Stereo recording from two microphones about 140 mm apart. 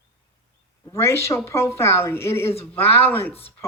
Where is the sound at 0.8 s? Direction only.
20° left (ahead or behind).